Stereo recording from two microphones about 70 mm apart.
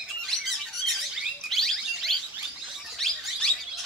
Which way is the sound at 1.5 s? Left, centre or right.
Centre.